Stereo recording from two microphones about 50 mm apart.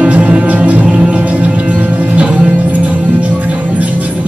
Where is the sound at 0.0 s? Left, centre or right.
Right.